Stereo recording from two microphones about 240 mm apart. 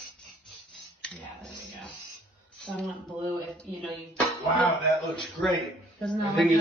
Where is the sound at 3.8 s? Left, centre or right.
Centre.